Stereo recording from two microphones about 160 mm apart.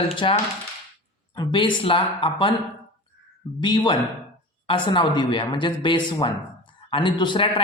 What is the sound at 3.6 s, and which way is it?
A man's voice, 30° left (ahead or behind).